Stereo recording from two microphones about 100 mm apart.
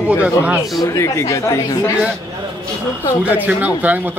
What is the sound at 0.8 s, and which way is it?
Speech, 30° left (ahead or behind).